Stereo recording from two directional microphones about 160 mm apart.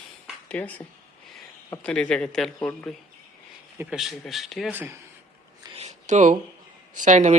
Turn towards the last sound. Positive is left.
turn(degrees=-50)  # may be behind; listen again after turning